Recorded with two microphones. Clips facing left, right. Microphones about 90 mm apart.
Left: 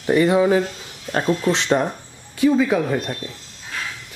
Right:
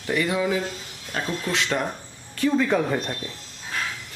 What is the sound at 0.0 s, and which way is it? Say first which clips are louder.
Speech: left 8 dB; 30° left (ahead or behind).